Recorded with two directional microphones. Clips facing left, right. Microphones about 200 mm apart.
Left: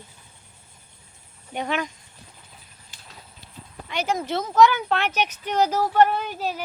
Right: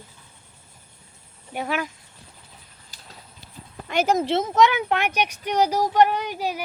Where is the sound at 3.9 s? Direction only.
45° right (ahead or behind).